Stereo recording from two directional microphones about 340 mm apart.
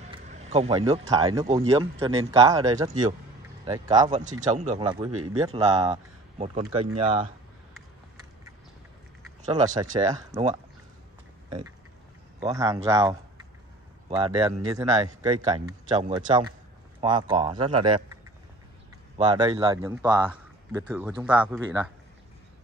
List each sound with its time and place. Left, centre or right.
0.0 s speech: centre
5.1 s speech: right
5.5 s speech: centre
9.5 s speech: centre
12.4 s speech: centre
19.1 s speech: centre